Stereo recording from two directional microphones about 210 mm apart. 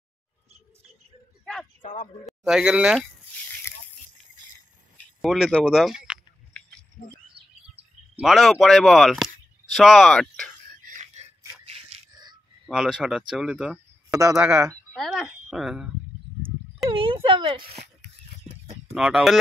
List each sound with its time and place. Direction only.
1.4 s a sound: 5° left (ahead or behind)
1.8 s speech: 35° left (ahead or behind)
2.2 s speech: 5° right (ahead or behind)
4.9 s a sound: centre (ahead or behind)
8.2 s speech: centre (ahead or behind)
10.7 s a sound: 35° right (ahead or behind)
12.6 s speech: centre (ahead or behind)
14.9 s speech: centre (ahead or behind)
16.9 s speech: 25° right (ahead or behind)
18.9 s speech: 5° right (ahead or behind)